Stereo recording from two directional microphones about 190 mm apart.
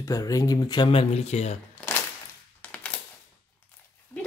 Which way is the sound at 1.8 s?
5° left (ahead or behind).